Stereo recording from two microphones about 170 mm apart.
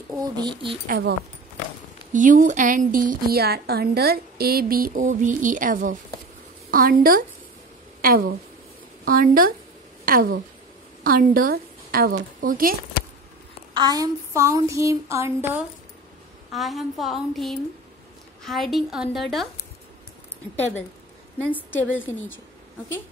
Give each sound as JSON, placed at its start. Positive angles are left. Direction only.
{"t": 0.1, "sound": "speech", "side_deg": -25}
{"t": 0.8, "sound": "a woman's voice", "side_deg": -60}
{"t": 2.1, "sound": "a woman's voice", "side_deg": -50}
{"t": 9.0, "sound": "a woman's voice", "side_deg": -55}
{"t": 13.7, "sound": "child singing", "side_deg": -25}
{"t": 16.5, "sound": "a woman's voice", "side_deg": 0}
{"t": 20.5, "sound": "speech", "side_deg": 10}